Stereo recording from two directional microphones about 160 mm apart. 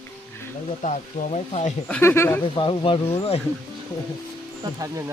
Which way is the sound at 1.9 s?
10° left (ahead or behind).